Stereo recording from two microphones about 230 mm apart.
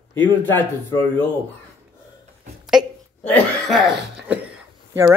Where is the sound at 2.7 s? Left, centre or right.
Centre.